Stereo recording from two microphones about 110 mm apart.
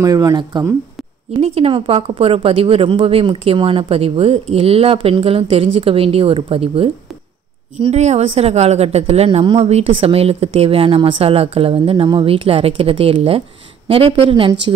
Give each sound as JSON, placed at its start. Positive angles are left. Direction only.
{"t": 0.0, "sound": "speech", "side_deg": -35}
{"t": 1.4, "sound": "a woman's voice", "side_deg": -65}
{"t": 1.7, "sound": "a woman's voice", "side_deg": -55}
{"t": 7.8, "sound": "a woman's voice", "side_deg": -85}